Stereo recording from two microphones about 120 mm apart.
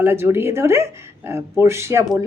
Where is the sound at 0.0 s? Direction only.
20° right (ahead or behind).